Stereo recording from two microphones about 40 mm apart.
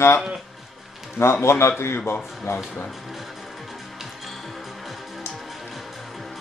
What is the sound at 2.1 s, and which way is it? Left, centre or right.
Speech, left.